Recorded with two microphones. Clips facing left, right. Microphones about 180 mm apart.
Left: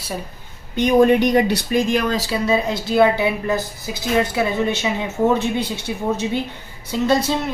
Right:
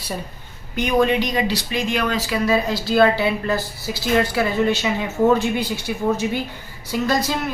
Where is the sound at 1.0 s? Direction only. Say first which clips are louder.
Left 6 dB; 55° left (ahead or behind); by 2.4 s 35° left (ahead or behind).